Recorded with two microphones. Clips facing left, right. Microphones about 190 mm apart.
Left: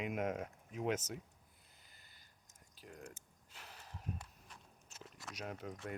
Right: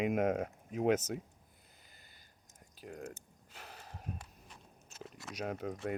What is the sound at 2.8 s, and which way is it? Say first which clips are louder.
Speech: right 7 dB; 60° right (ahead or behind).